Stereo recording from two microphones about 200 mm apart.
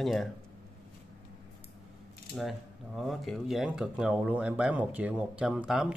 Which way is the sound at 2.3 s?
Centre (ahead or behind).